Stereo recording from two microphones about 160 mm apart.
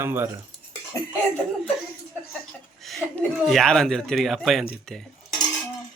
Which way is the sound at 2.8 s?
Centre (ahead or behind).